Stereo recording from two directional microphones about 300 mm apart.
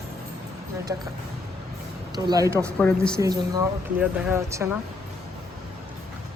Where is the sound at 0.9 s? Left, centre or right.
Centre.